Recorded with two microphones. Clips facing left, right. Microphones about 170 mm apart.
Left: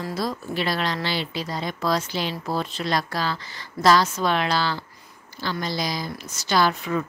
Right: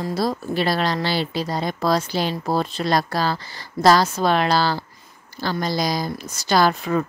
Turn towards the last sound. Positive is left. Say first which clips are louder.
# right 3 dB
turn(degrees=-40)  # may be behind; listen again after turning